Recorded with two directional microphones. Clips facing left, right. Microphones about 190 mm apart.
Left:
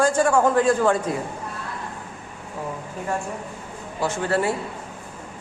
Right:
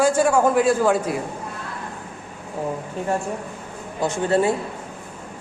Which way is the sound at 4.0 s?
20° right (ahead or behind).